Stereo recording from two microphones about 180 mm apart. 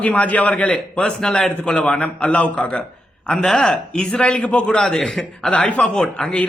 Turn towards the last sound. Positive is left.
turn(degrees=5)  # may be behind; listen again after turning